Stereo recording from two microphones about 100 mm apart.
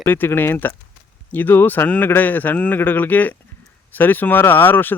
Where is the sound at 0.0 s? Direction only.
20° left (ahead or behind).